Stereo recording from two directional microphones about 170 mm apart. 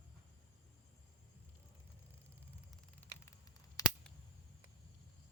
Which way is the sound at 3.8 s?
20° left (ahead or behind).